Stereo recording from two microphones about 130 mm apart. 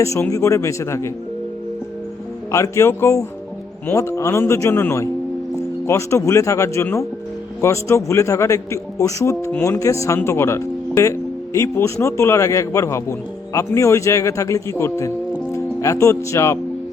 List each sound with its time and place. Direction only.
0.0 s speech: 25° left (ahead or behind)
2.5 s speech: 25° left (ahead or behind)